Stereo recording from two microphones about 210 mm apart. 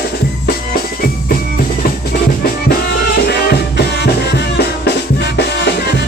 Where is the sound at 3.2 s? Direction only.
50° left (ahead or behind).